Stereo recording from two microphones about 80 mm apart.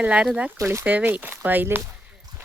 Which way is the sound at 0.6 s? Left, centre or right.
Right.